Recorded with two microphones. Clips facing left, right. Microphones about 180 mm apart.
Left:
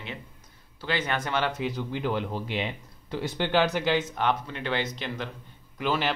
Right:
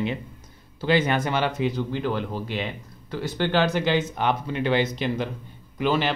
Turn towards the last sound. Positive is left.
turn(degrees=0)  # may be behind; listen again after turning